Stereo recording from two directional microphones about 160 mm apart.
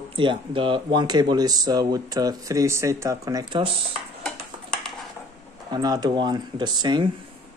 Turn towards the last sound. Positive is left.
turn(degrees=-30)  # may be behind; listen again after turning